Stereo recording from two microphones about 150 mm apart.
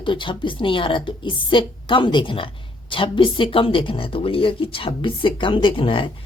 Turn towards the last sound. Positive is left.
turn(degrees=35)  # may be behind; listen again after turning